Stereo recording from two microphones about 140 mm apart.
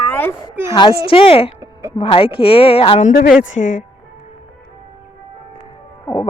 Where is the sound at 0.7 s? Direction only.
35° left (ahead or behind).